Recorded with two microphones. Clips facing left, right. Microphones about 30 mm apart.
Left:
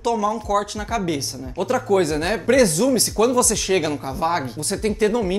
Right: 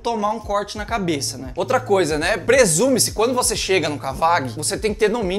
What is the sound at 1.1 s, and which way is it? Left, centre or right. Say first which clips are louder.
Speech: right 2 dB; right.